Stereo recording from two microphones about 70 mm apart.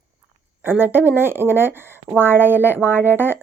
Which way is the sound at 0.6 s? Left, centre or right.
Right.